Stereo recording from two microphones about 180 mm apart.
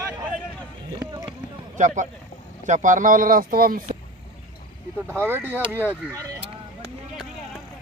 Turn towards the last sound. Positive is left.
turn(degrees=-10)  # may be behind; listen again after turning